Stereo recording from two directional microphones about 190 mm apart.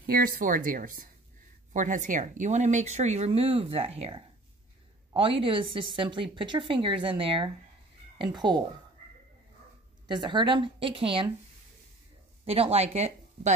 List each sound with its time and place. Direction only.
0.0 s a woman's voice: 50° right (ahead or behind); by 8.6 s 20° right (ahead or behind)
10.0 s speech: 25° right (ahead or behind)
12.4 s speech: 30° right (ahead or behind)